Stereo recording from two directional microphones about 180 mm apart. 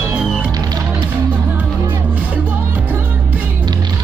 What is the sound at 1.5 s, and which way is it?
Music, 10° right (ahead or behind).